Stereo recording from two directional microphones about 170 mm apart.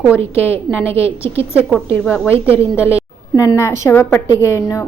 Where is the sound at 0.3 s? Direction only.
10° left (ahead or behind).